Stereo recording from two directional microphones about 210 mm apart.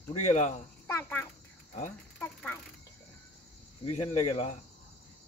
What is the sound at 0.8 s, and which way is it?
A child's voice, 10° left (ahead or behind).